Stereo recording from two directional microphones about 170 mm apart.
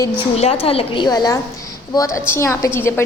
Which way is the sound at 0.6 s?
35° left (ahead or behind).